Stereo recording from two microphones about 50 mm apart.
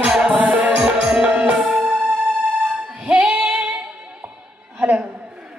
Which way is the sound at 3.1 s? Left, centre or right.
Right.